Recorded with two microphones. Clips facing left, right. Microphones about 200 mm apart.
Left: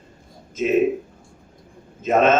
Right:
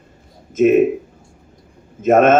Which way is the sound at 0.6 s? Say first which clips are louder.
Right 7 dB; 55° right (ahead or behind).